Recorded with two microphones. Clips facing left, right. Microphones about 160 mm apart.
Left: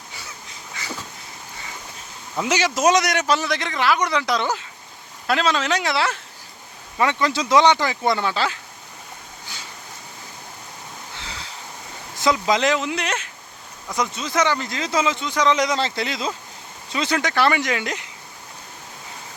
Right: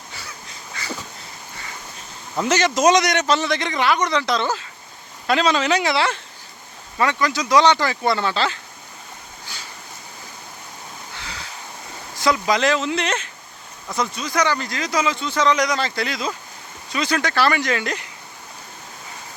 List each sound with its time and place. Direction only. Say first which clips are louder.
2.4 s speech: right 2 dB; 10° left (ahead or behind)
5.2 s speech: right 2 dB; centre (ahead or behind)
7.0 s speech: even; 25° left (ahead or behind)
12.2 s speech: even; 20° left (ahead or behind)
13.9 s speech: even; 20° left (ahead or behind)